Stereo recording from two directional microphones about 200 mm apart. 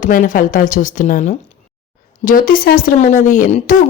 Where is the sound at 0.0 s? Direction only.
40° left (ahead or behind).